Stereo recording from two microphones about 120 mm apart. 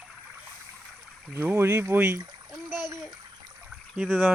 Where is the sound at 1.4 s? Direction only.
20° right (ahead or behind).